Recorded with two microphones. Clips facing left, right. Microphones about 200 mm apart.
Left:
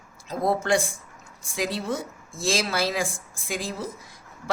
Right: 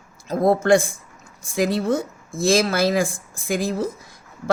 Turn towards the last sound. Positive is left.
turn(degrees=-45)  # may be behind; listen again after turning